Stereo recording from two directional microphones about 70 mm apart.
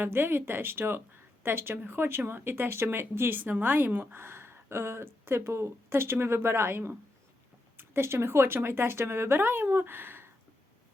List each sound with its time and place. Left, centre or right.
0.0 s speech: right